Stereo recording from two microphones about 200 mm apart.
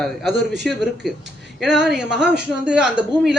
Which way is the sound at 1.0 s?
Centre (ahead or behind).